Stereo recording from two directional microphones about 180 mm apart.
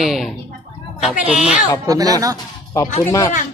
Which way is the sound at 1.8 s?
20° right (ahead or behind).